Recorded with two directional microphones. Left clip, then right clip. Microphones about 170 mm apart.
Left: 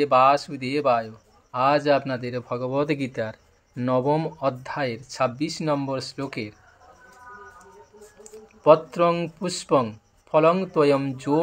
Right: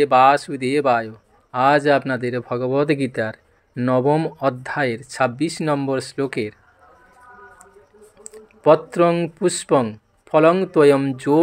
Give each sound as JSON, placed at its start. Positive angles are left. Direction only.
{"t": 0.0, "sound": "speech", "side_deg": -35}
{"t": 8.2, "sound": "speech", "side_deg": -35}